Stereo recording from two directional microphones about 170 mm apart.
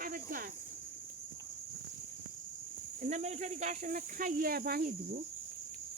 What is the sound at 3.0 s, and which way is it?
Speech, 45° right (ahead or behind).